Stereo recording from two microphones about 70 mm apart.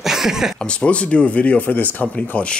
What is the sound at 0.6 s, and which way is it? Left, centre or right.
Speech, centre.